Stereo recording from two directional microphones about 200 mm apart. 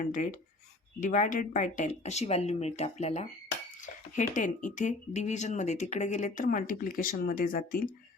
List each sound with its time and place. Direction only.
0.0 s speech: 40° left (ahead or behind)